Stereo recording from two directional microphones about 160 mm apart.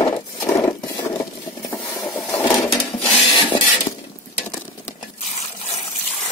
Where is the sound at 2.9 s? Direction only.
30° left (ahead or behind).